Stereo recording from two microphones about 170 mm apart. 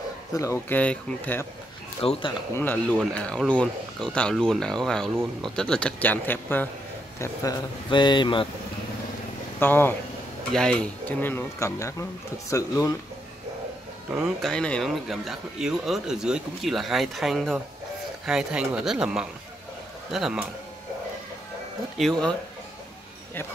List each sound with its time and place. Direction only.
0.3 s speech: 15° left (ahead or behind)
2.0 s speech: 30° left (ahead or behind)
2.5 s speech: 10° left (ahead or behind)
7.2 s speech: 25° left (ahead or behind)
9.6 s speech: 10° left (ahead or behind)
14.2 s speech: centre (ahead or behind)
21.9 s speech: centre (ahead or behind)